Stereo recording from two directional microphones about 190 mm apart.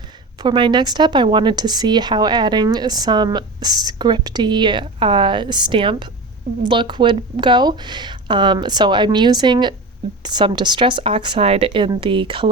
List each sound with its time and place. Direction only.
0.4 s speech: 25° right (ahead or behind)